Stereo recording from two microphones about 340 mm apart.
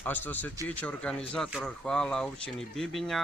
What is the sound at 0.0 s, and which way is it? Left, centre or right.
Speech, centre.